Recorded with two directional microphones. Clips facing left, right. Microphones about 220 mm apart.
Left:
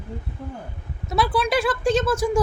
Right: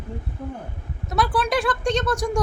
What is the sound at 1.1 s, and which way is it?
A woman's voice, centre (ahead or behind).